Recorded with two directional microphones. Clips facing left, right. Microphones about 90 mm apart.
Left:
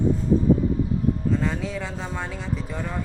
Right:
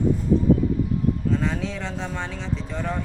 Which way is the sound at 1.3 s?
Centre (ahead or behind).